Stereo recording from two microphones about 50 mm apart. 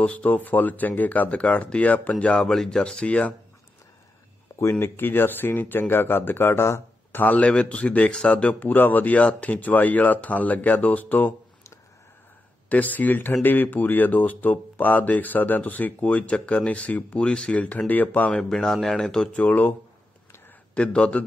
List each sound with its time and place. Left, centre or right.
0.0 s speech: left
2.4 s speech: centre
2.8 s speech: left
4.6 s speech: left
7.2 s speech: left
8.6 s speech: left
12.6 s speech: left
18.3 s speech: centre
19.3 s speech: left
20.7 s speech: left